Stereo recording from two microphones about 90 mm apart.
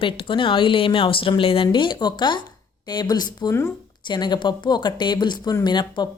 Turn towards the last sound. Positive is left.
turn(degrees=55)  # may be behind; listen again after turning